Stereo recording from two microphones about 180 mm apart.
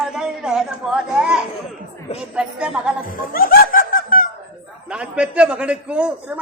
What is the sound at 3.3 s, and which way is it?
Snicker, 55° left (ahead or behind).